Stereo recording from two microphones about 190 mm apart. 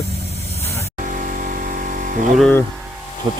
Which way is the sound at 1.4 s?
45° right (ahead or behind).